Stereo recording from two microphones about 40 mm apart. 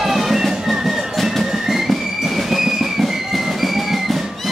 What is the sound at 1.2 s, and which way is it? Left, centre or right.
Music, centre.